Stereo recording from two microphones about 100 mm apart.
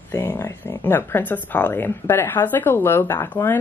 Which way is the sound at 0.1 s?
30° left (ahead or behind).